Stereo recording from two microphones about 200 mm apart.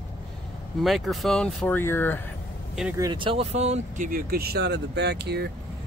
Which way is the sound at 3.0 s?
25° right (ahead or behind).